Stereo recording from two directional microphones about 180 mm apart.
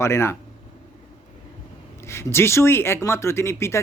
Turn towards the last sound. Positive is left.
turn(degrees=15)  # may be behind; listen again after turning